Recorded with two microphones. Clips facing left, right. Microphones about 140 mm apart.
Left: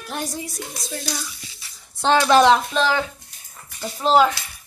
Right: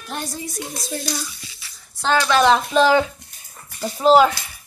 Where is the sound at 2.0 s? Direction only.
20° left (ahead or behind).